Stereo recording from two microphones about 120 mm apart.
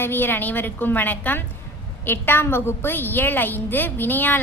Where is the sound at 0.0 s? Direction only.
15° left (ahead or behind).